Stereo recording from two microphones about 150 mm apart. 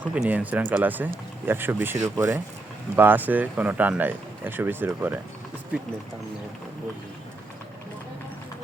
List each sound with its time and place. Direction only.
0.1 s speech: 10° right (ahead or behind)